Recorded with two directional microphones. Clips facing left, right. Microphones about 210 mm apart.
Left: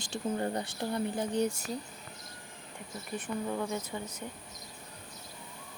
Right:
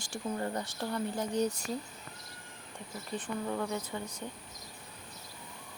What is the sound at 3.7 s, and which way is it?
Speech, 20° left (ahead or behind).